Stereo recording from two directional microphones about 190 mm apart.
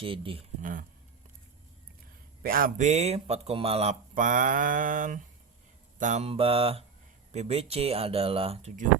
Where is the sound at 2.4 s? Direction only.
50° right (ahead or behind).